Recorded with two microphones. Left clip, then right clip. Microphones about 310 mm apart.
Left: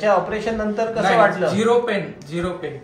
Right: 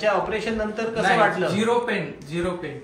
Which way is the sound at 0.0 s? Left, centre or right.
Left.